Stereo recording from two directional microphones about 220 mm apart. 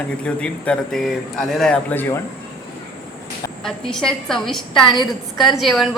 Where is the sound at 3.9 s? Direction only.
Centre (ahead or behind).